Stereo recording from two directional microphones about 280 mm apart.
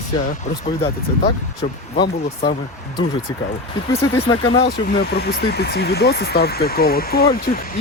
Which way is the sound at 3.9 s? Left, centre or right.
Centre.